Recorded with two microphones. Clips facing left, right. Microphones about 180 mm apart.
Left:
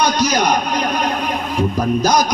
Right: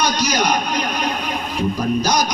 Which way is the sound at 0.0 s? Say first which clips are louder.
Left 3 dB; 55° left (ahead or behind).